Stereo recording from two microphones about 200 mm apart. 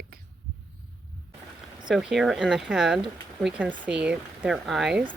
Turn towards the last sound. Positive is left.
turn(degrees=-5)  # may be behind; listen again after turning